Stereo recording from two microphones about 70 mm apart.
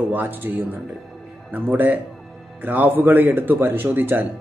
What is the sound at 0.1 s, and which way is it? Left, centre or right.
A man's voice, right.